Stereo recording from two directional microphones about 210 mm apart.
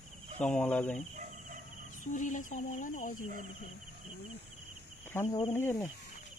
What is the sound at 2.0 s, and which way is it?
Speech, 40° left (ahead or behind).